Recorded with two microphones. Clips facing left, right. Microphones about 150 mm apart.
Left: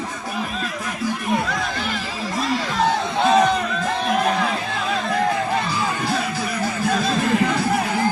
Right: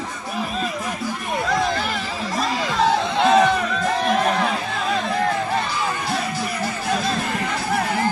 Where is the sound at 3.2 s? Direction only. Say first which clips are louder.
Even; centre (ahead or behind).